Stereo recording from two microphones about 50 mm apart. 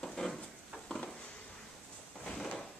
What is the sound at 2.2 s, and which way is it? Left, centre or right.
Drawer open or close, centre.